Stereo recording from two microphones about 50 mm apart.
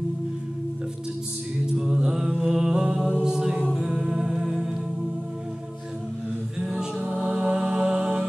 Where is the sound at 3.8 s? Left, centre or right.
Centre.